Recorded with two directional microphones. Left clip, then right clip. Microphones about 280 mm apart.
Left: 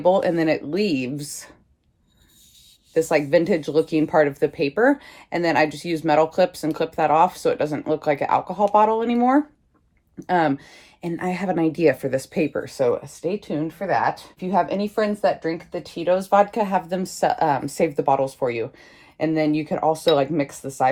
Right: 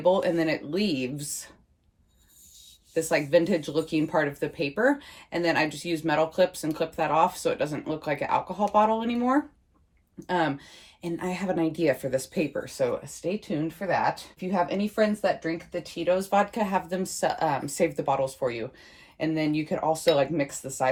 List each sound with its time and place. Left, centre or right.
0.0 s speech: left
2.9 s speech: left